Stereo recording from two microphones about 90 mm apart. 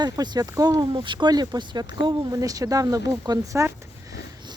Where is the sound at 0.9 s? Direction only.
65° right (ahead or behind); by 3.7 s 35° right (ahead or behind).